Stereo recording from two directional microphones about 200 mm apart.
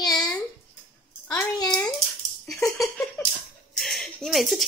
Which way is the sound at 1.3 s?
15° left (ahead or behind).